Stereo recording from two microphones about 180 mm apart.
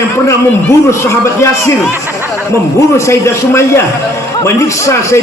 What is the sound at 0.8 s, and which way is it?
Speech, 15° left (ahead or behind).